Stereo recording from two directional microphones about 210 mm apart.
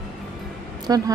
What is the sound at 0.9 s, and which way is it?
Speech, 15° right (ahead or behind).